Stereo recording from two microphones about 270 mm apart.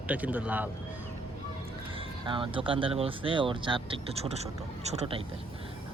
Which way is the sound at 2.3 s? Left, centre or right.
Centre.